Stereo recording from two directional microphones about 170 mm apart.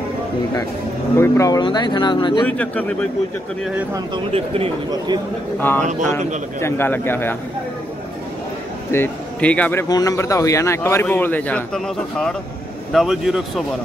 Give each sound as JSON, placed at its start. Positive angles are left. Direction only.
{"t": 1.1, "sound": "speech", "side_deg": 15}
{"t": 2.4, "sound": "a man's voice", "side_deg": 10}
{"t": 4.3, "sound": "speech", "side_deg": -30}
{"t": 5.6, "sound": "a man's voice", "side_deg": 10}
{"t": 8.9, "sound": "a man's voice", "side_deg": 10}
{"t": 9.8, "sound": "a man's voice", "side_deg": 20}